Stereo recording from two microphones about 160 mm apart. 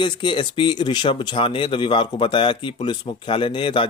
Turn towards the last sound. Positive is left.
turn(degrees=30)  # may be behind; listen again after turning